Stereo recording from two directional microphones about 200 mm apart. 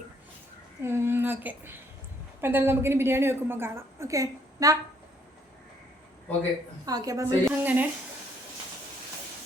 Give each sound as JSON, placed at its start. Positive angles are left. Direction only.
{"t": 0.9, "sound": "a woman's voice", "side_deg": -10}
{"t": 6.8, "sound": "a woman's voice", "side_deg": -15}